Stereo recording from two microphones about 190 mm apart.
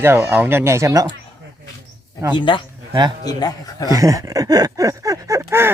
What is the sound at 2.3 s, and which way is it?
A man's voice, 25° left (ahead or behind).